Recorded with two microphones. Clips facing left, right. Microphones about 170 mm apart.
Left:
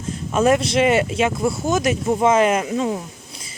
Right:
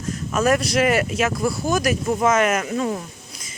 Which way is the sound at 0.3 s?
25° left (ahead or behind).